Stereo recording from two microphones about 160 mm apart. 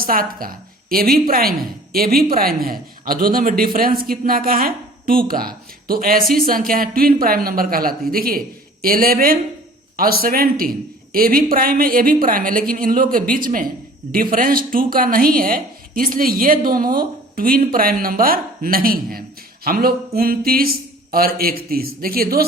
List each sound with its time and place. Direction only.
0.0 s a woman's voice: 65° right (ahead or behind)